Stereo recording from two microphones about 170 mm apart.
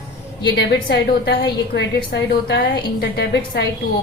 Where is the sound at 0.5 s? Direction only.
90° left.